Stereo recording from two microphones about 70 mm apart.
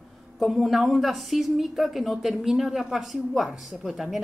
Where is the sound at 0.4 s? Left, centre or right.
Centre.